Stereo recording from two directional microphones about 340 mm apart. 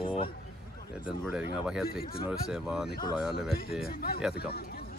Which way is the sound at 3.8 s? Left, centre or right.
Left.